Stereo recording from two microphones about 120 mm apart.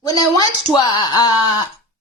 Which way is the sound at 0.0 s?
30° left (ahead or behind).